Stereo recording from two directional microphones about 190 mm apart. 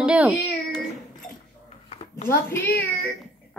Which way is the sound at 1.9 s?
35° left (ahead or behind).